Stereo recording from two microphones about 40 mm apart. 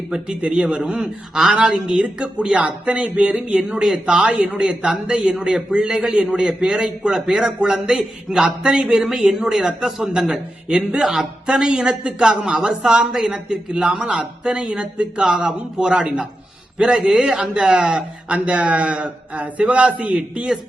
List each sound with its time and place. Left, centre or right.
0.1 s a man's voice: right
0.8 s a man's voice: centre
3.7 s a man's voice: centre
11.0 s a man's voice: centre
11.4 s a man's voice: centre
17.0 s a man's voice: centre
18.3 s a man's voice: right
20.1 s a man's voice: right